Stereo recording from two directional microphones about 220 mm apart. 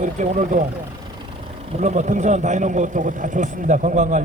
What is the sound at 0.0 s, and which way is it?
Speech, 35° right (ahead or behind).